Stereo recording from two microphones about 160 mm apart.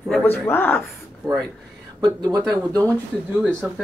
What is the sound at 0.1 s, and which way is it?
Speech, 15° left (ahead or behind).